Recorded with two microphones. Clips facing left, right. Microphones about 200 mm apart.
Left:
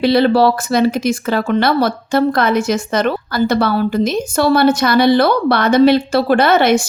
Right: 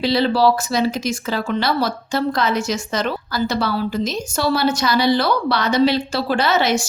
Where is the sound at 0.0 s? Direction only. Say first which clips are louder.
Left 5 dB; 55° left (ahead or behind).